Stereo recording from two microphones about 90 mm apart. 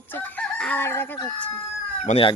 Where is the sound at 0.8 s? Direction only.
25° left (ahead or behind).